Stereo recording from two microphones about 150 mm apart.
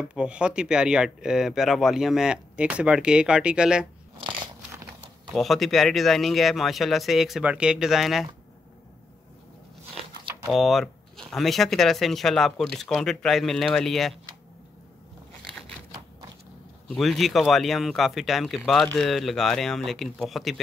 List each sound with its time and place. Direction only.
0.1 s speech: 5° right (ahead or behind)
4.2 s biting: 35° right (ahead or behind)
5.3 s speech: centre (ahead or behind)
10.5 s speech: centre (ahead or behind)
16.9 s speech: centre (ahead or behind)